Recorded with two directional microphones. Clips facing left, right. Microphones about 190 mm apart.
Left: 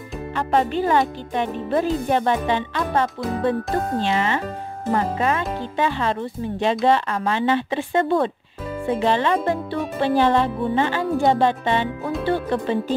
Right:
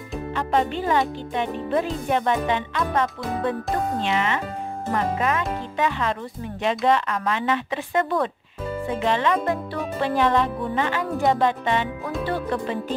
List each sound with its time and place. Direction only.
0.5 s speech: 40° left (ahead or behind)